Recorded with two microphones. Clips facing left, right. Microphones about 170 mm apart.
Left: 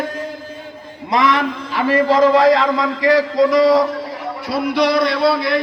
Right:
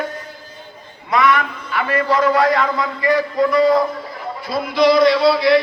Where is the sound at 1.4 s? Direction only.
35° left (ahead or behind).